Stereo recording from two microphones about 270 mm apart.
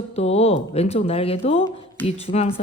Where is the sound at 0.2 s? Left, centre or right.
Left.